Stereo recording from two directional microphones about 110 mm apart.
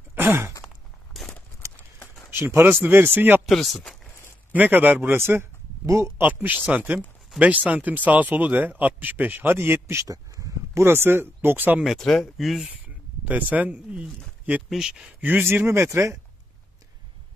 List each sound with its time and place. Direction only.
0.1 s a sound: 20° right (ahead or behind)
1.1 s a sound: centre (ahead or behind)
2.3 s speech: 20° right (ahead or behind)
3.4 s speech: centre (ahead or behind)
4.6 s speech: 15° right (ahead or behind)
11.8 s speech: centre (ahead or behind)
13.2 s speech: 15° right (ahead or behind)